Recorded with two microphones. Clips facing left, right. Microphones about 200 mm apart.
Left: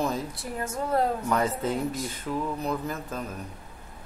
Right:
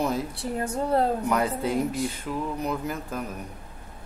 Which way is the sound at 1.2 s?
10° right (ahead or behind).